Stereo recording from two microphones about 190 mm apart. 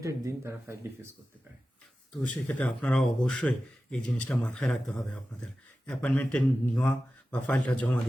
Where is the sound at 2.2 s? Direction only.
5° left (ahead or behind).